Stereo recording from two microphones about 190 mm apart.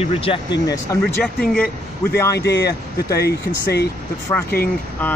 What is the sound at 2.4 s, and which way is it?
Speech, 60° left (ahead or behind).